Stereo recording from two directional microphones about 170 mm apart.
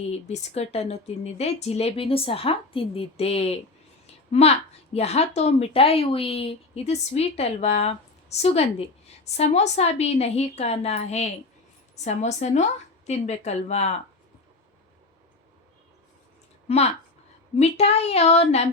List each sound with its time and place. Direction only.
0.1 s a woman's voice: 40° left (ahead or behind)
4.0 s a sound: 35° left (ahead or behind)
4.9 s a woman's voice: 40° left (ahead or behind)
16.6 s a woman's voice: 40° left (ahead or behind)